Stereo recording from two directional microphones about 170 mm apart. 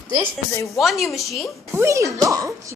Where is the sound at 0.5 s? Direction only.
20° left (ahead or behind).